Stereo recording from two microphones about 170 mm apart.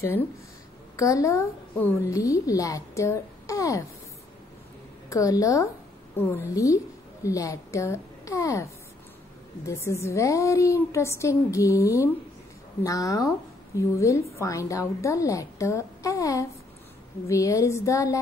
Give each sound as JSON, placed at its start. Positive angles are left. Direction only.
{"t": 0.9, "sound": "a woman's voice", "side_deg": 20}
{"t": 5.1, "sound": "a woman's voice", "side_deg": 20}
{"t": 9.7, "sound": "a woman's voice", "side_deg": 15}